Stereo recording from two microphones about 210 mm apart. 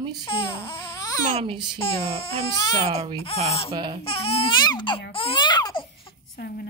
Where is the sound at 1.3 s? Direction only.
25° right (ahead or behind).